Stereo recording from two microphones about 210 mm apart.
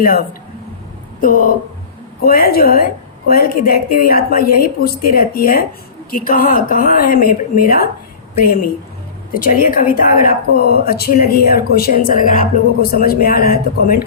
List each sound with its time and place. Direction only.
0.0 s a woman's voice: 45° left (ahead or behind)
9.3 s a woman's voice: 40° left (ahead or behind)